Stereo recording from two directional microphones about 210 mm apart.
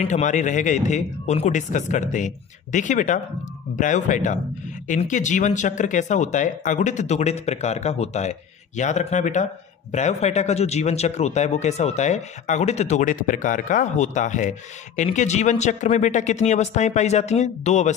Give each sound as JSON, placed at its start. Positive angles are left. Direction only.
{"t": 0.0, "sound": "speech", "side_deg": 35}